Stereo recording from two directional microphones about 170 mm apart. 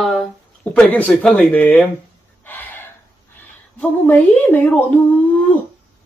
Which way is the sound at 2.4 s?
10° left (ahead or behind).